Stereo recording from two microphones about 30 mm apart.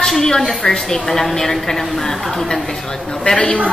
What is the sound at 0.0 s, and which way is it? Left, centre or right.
A woman's voice, centre.